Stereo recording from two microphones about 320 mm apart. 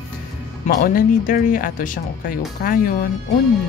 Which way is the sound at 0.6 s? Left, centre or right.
Left.